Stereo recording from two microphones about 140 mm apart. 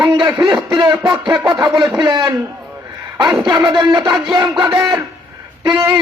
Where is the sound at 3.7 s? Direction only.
30° right (ahead or behind).